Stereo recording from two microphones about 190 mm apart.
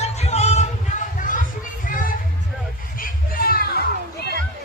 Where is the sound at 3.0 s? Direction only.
50° left (ahead or behind).